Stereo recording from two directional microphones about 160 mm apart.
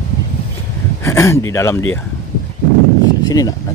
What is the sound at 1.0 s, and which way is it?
Speech, 20° left (ahead or behind).